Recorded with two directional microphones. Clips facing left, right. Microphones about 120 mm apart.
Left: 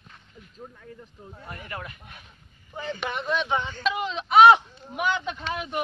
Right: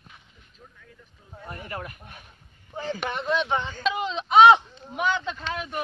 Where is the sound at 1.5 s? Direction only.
35° right (ahead or behind).